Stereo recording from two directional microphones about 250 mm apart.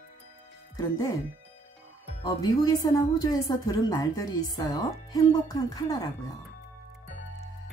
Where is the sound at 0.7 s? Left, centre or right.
Centre.